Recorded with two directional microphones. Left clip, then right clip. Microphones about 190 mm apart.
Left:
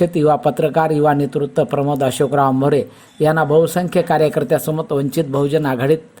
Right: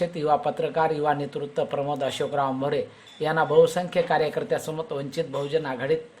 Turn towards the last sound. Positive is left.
turn(degrees=40)  # may be behind; listen again after turning